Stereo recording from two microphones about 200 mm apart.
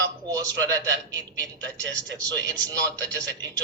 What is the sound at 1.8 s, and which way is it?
Speech, 65° right (ahead or behind).